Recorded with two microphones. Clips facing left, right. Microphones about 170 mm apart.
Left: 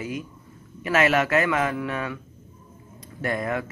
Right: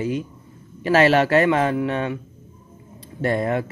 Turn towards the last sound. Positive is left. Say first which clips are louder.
# right 5 dB
turn(degrees=-30)  # may be behind; listen again after turning